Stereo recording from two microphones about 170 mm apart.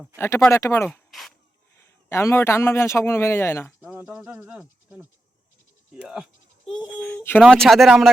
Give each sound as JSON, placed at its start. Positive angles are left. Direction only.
{"t": 0.2, "sound": "a man's voice", "side_deg": 15}
{"t": 2.0, "sound": "a man's voice", "side_deg": 15}
{"t": 3.8, "sound": "speech", "side_deg": -5}
{"t": 6.7, "sound": "a man's voice", "side_deg": 5}